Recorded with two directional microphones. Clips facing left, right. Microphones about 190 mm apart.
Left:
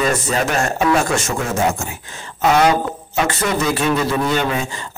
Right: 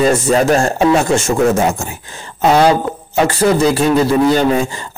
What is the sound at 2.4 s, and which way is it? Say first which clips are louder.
Speech: right 4 dB; 30° right (ahead or behind).